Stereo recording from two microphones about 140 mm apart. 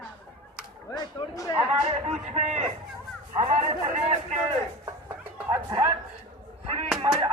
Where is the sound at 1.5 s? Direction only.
50° right (ahead or behind).